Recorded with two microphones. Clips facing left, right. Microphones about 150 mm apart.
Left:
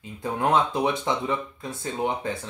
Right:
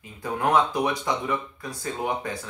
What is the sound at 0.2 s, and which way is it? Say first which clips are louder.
Speech: even; 25° left (ahead or behind).